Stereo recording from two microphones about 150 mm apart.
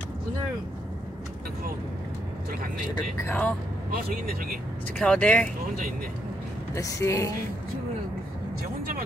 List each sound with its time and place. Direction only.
2.9 s speech: 20° left (ahead or behind)
3.9 s speech: 75° right (ahead or behind)
4.9 s speech: 5° left (ahead or behind)
6.7 s speech: 20° left (ahead or behind)